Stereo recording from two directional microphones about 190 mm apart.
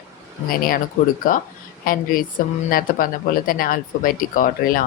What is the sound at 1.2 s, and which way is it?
A woman's voice, 45° left (ahead or behind).